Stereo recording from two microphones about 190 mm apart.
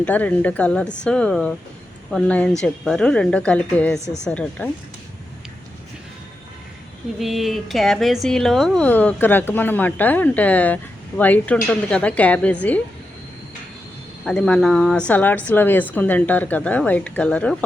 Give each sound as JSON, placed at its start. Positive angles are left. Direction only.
{"t": 0.0, "sound": "a woman's voice", "side_deg": 10}
{"t": 4.0, "sound": "a woman's voice", "side_deg": 35}
{"t": 4.3, "sound": "a woman's voice", "side_deg": 5}
{"t": 7.2, "sound": "a woman's voice", "side_deg": 0}
{"t": 14.3, "sound": "a woman's voice", "side_deg": 5}